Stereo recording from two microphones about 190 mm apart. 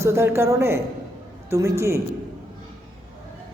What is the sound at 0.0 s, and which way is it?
A man's voice, 15° right (ahead or behind).